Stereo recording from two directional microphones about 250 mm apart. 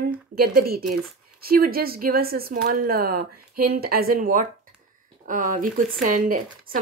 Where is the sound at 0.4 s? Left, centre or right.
Right.